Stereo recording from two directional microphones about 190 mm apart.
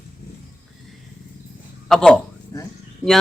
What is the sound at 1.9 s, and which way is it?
Speech, 5° left (ahead or behind).